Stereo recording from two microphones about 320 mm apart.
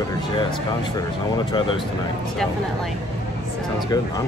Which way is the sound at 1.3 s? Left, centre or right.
Centre.